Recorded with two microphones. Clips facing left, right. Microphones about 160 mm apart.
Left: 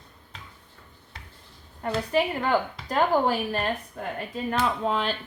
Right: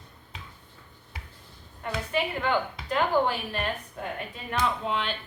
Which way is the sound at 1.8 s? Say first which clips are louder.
Left 5 dB; 40° left (ahead or behind).